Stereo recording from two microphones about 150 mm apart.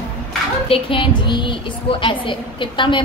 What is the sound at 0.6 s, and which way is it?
A woman's voice, 35° left (ahead or behind).